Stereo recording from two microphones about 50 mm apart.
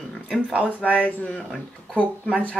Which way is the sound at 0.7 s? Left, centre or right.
Left.